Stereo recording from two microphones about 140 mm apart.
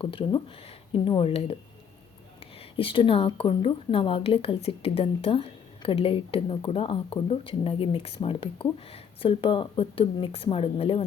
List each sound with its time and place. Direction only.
0.0 s a woman's voice: 40° left (ahead or behind)
2.7 s a woman's voice: 40° left (ahead or behind)